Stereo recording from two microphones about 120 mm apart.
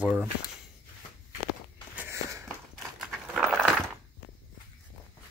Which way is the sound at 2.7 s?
Centre (ahead or behind).